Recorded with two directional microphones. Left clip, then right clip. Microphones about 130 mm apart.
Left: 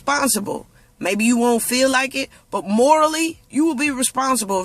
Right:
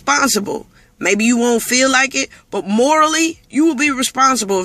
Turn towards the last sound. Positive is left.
turn(degrees=25)  # may be behind; listen again after turning